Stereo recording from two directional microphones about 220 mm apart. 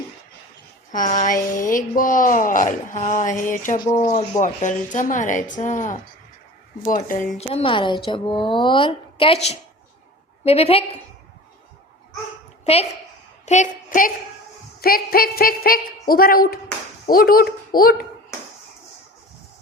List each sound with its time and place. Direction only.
0.9 s speech: 35° left (ahead or behind)
7.3 s a woman's voice: 25° left (ahead or behind)
12.6 s a woman's voice: 30° left (ahead or behind)